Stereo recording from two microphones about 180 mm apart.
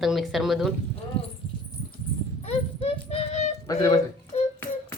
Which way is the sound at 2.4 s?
35° left (ahead or behind).